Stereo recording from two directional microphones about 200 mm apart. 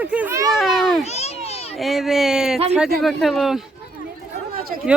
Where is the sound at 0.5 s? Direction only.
Centre (ahead or behind).